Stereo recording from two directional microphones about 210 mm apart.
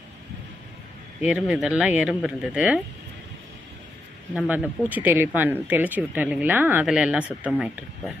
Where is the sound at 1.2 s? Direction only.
5° right (ahead or behind).